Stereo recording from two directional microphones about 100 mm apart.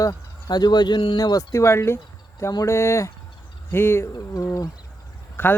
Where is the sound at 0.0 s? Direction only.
40° left (ahead or behind).